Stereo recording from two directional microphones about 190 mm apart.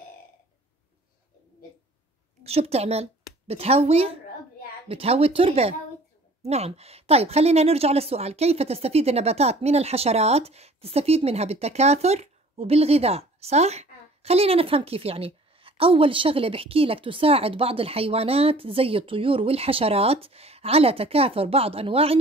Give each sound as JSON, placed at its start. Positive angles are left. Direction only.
{"t": 2.4, "sound": "a woman's voice", "side_deg": -35}